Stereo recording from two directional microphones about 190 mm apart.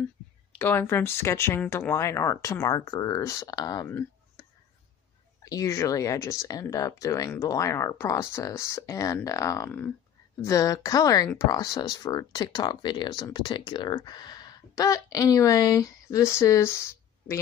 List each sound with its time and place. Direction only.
0.6 s speech: 10° left (ahead or behind)